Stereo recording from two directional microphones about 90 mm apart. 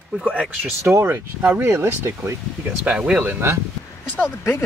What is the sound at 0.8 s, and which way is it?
Speech, 30° right (ahead or behind).